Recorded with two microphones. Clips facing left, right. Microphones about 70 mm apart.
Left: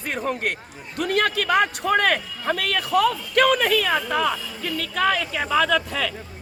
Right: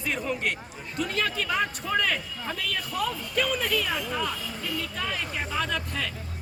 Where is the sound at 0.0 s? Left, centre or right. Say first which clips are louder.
Left 3 dB; left.